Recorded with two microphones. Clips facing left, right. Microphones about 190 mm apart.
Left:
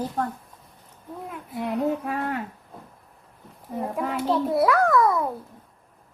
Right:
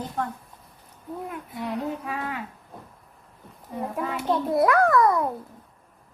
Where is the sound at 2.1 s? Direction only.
50° left (ahead or behind).